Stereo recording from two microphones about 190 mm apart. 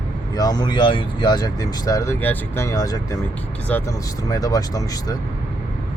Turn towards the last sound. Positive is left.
turn(degrees=20)  # may be behind; listen again after turning